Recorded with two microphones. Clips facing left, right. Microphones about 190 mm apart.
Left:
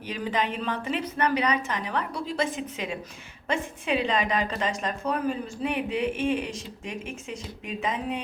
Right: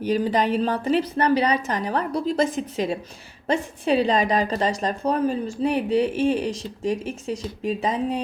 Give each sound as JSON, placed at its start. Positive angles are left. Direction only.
{"t": 0.0, "sound": "a woman's voice", "side_deg": -35}